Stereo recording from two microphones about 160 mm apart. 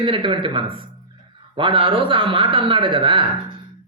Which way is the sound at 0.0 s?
30° right (ahead or behind).